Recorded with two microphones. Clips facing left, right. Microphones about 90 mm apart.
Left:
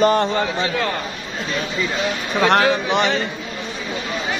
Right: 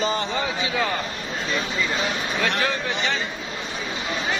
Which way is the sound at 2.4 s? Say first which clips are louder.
Left 10 dB; 65° left (ahead or behind).